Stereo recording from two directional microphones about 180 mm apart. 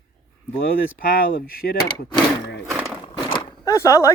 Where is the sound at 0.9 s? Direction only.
50° left (ahead or behind).